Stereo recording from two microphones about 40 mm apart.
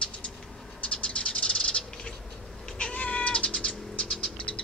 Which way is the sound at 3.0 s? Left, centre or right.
Left.